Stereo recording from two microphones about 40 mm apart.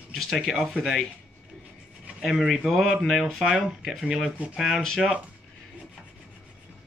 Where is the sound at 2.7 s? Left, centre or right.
Centre.